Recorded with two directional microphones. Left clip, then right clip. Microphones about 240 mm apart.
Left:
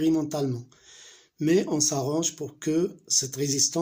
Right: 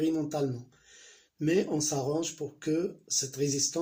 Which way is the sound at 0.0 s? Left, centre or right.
Left.